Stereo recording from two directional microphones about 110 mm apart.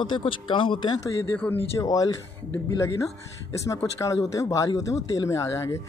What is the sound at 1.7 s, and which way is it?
Speech, 35° left (ahead or behind).